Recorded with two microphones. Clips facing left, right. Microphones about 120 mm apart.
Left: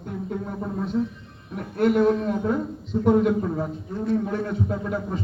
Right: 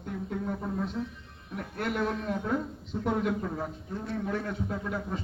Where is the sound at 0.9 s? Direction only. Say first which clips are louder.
Left 10 dB; 20° left (ahead or behind).